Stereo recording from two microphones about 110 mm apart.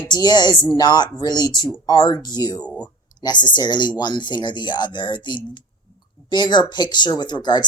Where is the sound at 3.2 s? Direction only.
40° left (ahead or behind).